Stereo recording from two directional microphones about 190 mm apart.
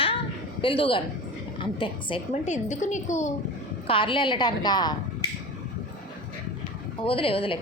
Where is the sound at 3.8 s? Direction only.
25° left (ahead or behind).